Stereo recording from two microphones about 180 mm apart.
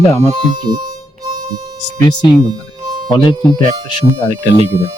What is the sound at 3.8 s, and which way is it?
Speech, 30° left (ahead or behind).